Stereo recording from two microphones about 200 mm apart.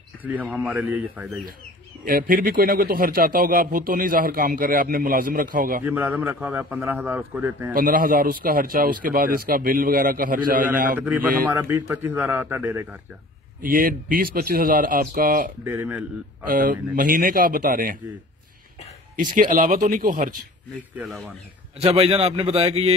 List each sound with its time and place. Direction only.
0.2 s a man's voice: 10° right (ahead or behind)
2.0 s speech: 45° right (ahead or behind)
5.9 s a man's voice: 10° right (ahead or behind)
7.7 s speech: 45° right (ahead or behind)
11.0 s a man's voice: 10° right (ahead or behind)
13.6 s speech: 45° right (ahead or behind)
15.6 s a man's voice: 10° right (ahead or behind)
16.4 s speech: 45° right (ahead or behind)
19.3 s speech: 40° right (ahead or behind)
20.9 s speech: centre (ahead or behind)
21.7 s a man's voice: 30° right (ahead or behind)